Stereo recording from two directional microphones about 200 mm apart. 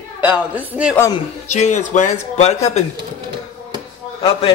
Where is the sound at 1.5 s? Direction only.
35° left (ahead or behind).